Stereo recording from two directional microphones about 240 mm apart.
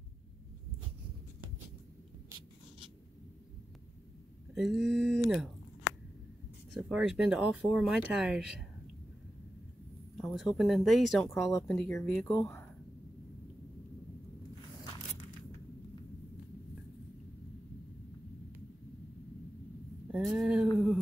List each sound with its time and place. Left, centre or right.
4.6 s speech: centre
6.7 s speech: centre
10.2 s speech: centre
20.1 s a sound: centre